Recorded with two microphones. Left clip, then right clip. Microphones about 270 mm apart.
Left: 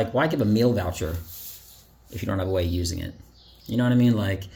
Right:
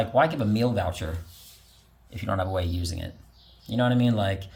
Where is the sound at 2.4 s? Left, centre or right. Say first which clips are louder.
Left 3 dB; centre.